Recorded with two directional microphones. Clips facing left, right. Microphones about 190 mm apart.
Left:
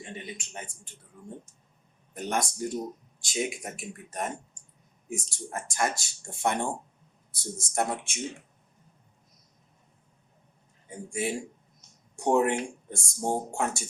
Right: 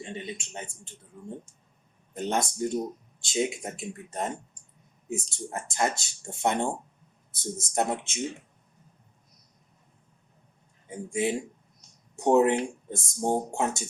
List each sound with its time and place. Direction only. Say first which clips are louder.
0.0 s a sound: right 3 dB; 25° right (ahead or behind)
2.1 s speech: right 2 dB; 25° right (ahead or behind)
7.7 s speech: right 2 dB; 20° right (ahead or behind)
10.8 s speech: right 4 dB; 20° right (ahead or behind)